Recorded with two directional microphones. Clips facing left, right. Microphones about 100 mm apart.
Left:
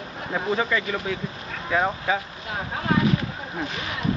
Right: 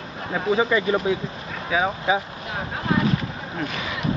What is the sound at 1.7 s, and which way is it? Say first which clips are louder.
Speech: even; centre (ahead or behind).